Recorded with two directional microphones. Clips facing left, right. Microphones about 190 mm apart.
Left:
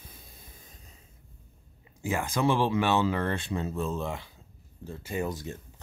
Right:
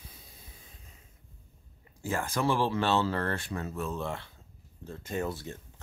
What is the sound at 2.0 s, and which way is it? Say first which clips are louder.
Speech: left 3 dB; 20° left (ahead or behind).